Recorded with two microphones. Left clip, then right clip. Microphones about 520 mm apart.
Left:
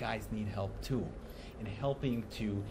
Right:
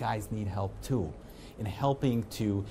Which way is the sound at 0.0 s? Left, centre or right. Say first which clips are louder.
Right 5 dB; right.